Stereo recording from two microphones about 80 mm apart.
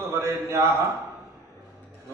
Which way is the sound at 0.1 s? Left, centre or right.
Right.